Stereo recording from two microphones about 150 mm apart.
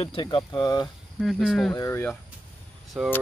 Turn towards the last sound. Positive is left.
turn(degrees=0)  # may be behind; listen again after turning